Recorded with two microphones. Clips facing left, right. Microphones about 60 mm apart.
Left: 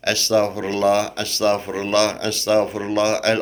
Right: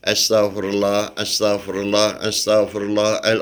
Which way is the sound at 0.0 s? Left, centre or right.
Left.